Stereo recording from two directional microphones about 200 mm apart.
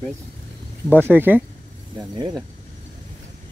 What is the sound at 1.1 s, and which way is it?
Speech, 10° right (ahead or behind).